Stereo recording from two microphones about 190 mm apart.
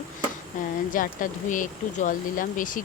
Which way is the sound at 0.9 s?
45° left (ahead or behind).